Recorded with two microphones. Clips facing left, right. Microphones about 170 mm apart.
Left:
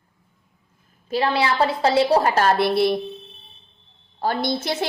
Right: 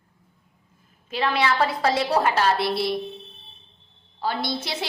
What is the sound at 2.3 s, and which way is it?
Speech, 55° left (ahead or behind).